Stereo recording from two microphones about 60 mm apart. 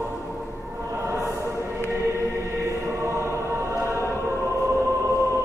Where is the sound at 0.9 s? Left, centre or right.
Right.